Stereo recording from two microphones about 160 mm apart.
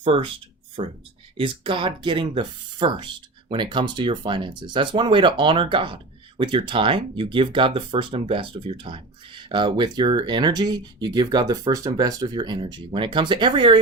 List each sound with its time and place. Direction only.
0.0 s speech: 30° right (ahead or behind)